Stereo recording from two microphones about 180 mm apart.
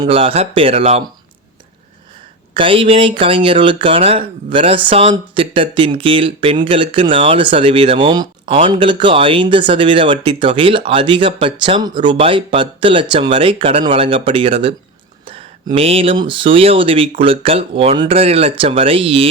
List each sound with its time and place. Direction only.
0.0 s speech: 30° right (ahead or behind)
2.6 s speech: 30° right (ahead or behind)